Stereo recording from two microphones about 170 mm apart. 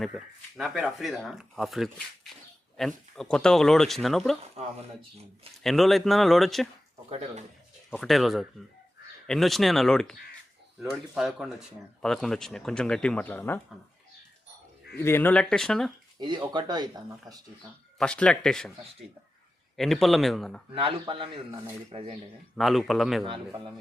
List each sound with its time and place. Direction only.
0.1 s speech: centre (ahead or behind)
4.6 s a man's voice: 35° right (ahead or behind)
5.6 s speech: centre (ahead or behind)
7.1 s a man's voice: 40° right (ahead or behind)
7.9 s speech: centre (ahead or behind)
14.9 s speech: 15° left (ahead or behind)
16.2 s speech: 25° right (ahead or behind)
17.9 s speech: 5° left (ahead or behind)
19.7 s speech: centre (ahead or behind)
20.7 s a man's voice: 30° right (ahead or behind)
22.5 s speech: centre (ahead or behind)
23.2 s speech: 30° right (ahead or behind)